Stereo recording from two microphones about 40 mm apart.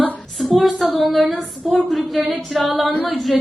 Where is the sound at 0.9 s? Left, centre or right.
Centre.